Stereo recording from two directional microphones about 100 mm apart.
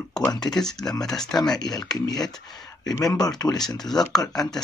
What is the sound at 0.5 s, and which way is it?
Speech, 5° left (ahead or behind).